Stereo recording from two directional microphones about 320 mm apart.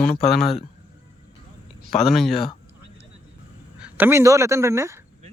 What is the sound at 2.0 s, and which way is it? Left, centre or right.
Speech, centre.